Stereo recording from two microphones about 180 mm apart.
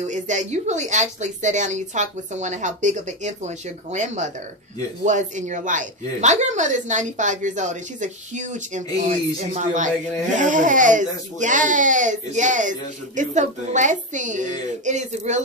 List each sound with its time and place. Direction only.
0.1 s speech: 40° right (ahead or behind)